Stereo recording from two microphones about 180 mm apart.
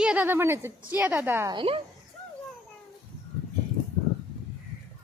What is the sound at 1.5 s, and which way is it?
Speech, 30° right (ahead or behind).